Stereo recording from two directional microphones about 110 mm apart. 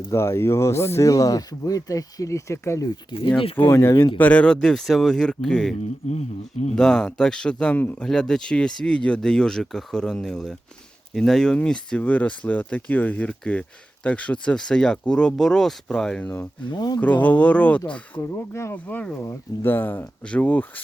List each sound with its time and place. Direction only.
0.1 s speech: 25° left (ahead or behind)
3.1 s speech: 45° left (ahead or behind)
3.4 s speech: 55° left (ahead or behind)
3.7 s speech: 25° left (ahead or behind)
4.2 s speech: 15° left (ahead or behind)
6.1 s speech: 90° left
6.7 s speech: 5° left (ahead or behind)
16.6 s speech: 40° left (ahead or behind)
17.0 s speech: 15° left (ahead or behind)
18.2 s speech: 25° left (ahead or behind)